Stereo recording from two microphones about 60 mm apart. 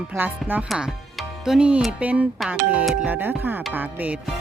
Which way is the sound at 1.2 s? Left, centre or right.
Centre.